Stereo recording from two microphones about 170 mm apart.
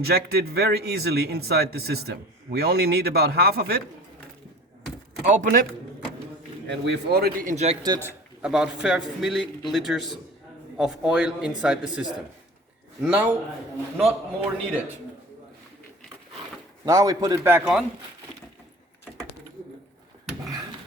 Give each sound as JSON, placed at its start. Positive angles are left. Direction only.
{"t": 0.0, "sound": "speech", "side_deg": -70}
{"t": 5.3, "sound": "a man's voice", "side_deg": -50}
{"t": 6.7, "sound": "speech", "side_deg": -80}
{"t": 7.5, "sound": "a man's voice", "side_deg": -40}
{"t": 8.4, "sound": "a man's voice", "side_deg": -5}
{"t": 16.8, "sound": "a man's voice", "side_deg": -20}